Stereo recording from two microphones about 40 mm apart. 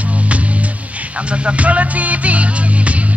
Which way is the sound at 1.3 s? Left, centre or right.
Right.